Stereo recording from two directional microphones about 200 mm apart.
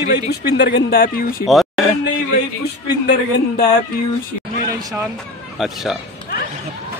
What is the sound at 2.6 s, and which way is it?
Speech, 55° left (ahead or behind).